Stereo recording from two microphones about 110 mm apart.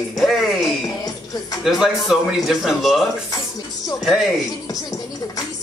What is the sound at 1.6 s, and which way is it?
A man's voice, centre (ahead or behind).